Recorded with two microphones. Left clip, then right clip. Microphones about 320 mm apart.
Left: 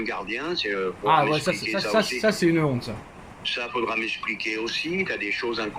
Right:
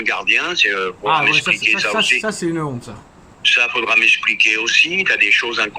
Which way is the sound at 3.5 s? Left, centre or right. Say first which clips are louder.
Right 12 dB; right.